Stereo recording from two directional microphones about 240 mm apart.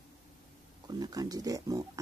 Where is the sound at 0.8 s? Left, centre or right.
Centre.